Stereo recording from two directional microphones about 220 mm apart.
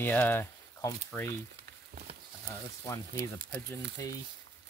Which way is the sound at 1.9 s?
45° right (ahead or behind).